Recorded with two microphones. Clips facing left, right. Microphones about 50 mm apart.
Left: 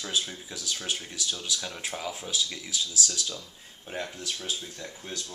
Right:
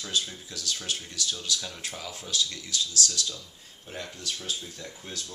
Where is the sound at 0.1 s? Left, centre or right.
Centre.